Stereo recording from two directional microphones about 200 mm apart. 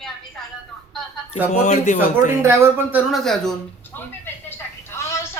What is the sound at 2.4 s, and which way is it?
Speech, 10° right (ahead or behind).